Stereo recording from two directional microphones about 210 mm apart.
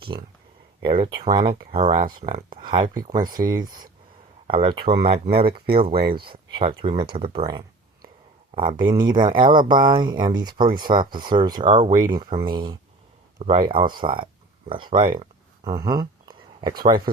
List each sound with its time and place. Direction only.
0.9 s speech: 25° right (ahead or behind)
3.2 s speech: 40° right (ahead or behind)
4.4 s speech: 25° right (ahead or behind)
5.9 s speech: 45° right (ahead or behind)
6.1 s speech: 25° right (ahead or behind)
14.7 s a sound: 20° right (ahead or behind)